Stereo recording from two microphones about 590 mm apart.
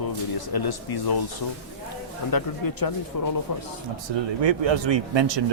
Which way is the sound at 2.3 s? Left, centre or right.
Left.